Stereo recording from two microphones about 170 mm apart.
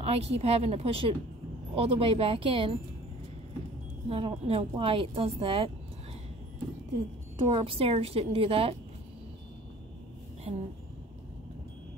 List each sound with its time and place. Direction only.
0.0 s a woman's voice: 35° right (ahead or behind)
4.1 s a woman's voice: 35° right (ahead or behind)
7.3 s a woman's voice: 30° right (ahead or behind)
10.5 s a woman's voice: 35° right (ahead or behind)